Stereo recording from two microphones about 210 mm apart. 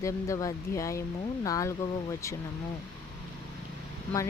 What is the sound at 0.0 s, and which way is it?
Speech, 15° left (ahead or behind).